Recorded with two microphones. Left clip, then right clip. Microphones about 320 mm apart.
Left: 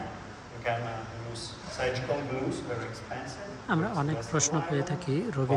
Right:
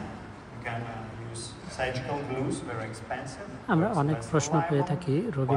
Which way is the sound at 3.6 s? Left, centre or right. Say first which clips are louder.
Right 4 dB; centre.